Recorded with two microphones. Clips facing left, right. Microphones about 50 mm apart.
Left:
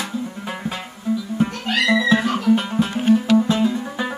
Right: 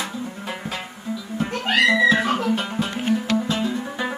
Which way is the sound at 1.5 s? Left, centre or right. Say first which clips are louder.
Right 2 dB; right.